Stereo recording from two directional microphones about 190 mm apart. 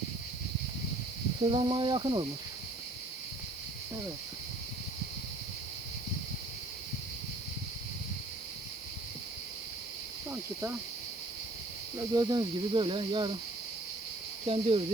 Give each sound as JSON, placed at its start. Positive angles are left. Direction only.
{"t": 1.4, "sound": "speech", "side_deg": -25}
{"t": 11.9, "sound": "speech", "side_deg": -20}
{"t": 14.4, "sound": "speech", "side_deg": -30}